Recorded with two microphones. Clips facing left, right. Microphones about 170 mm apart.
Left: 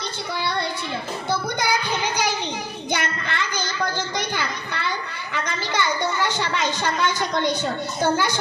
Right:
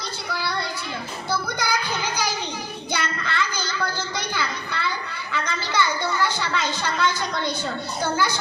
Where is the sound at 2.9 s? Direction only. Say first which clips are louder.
Left 2 dB; 20° left (ahead or behind).